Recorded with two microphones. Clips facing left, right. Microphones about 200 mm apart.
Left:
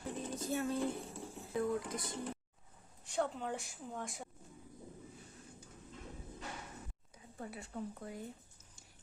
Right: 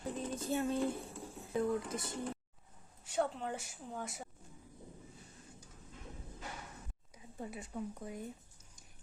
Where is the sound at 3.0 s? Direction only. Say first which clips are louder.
Right 1 dB; 5° right (ahead or behind).